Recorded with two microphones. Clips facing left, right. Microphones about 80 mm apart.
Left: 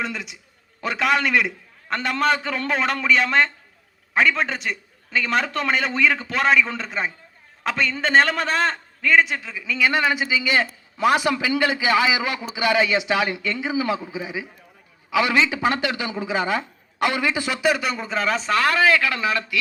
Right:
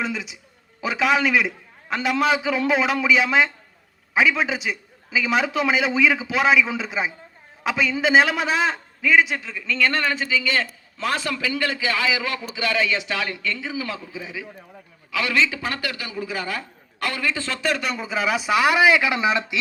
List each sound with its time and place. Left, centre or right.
0.0 s a man's voice: centre